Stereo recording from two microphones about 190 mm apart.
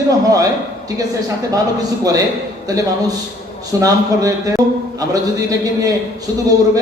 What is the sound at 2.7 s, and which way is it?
A man's voice, 20° right (ahead or behind).